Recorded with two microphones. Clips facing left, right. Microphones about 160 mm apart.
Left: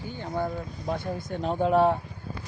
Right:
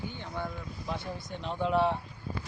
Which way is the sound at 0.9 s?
50° left (ahead or behind).